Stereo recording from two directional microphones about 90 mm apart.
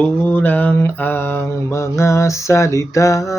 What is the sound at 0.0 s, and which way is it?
Mantra, 20° left (ahead or behind).